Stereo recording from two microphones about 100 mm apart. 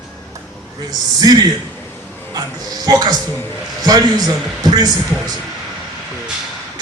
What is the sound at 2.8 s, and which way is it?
A man's voice, 40° right (ahead or behind).